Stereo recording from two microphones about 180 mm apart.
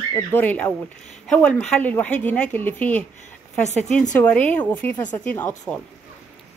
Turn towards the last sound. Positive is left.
turn(degrees=10)  # may be behind; listen again after turning